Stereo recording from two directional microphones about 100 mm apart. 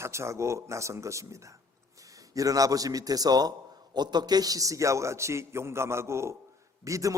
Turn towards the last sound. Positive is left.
turn(degrees=-35)  # may be behind; listen again after turning